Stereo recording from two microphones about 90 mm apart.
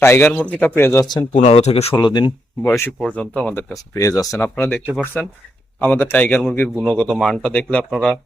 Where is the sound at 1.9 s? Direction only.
55° left (ahead or behind).